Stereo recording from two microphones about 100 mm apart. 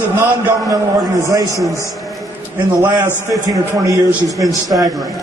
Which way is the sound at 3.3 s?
35° right (ahead or behind).